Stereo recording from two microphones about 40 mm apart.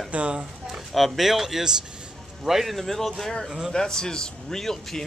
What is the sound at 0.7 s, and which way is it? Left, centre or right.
Speech, centre.